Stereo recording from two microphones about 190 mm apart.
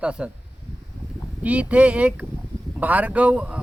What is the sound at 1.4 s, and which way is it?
Speech, 5° right (ahead or behind).